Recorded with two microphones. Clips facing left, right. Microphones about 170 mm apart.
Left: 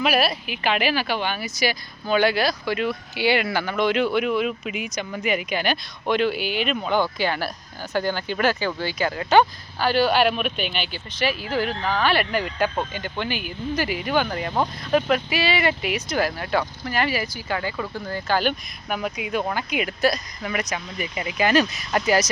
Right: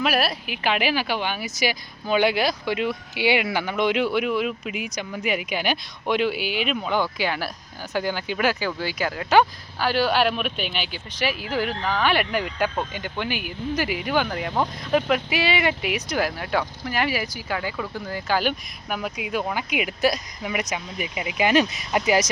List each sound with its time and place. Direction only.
0.0 s speech: centre (ahead or behind); by 22.2 s 15° right (ahead or behind)